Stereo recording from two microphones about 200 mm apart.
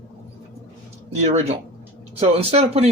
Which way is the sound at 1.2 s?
30° right (ahead or behind).